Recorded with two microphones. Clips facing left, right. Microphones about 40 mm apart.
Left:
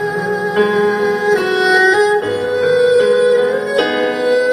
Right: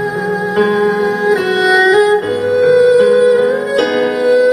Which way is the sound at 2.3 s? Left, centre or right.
Centre.